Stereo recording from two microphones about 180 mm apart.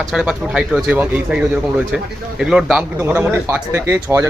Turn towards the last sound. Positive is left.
turn(degrees=-15)  # may be behind; listen again after turning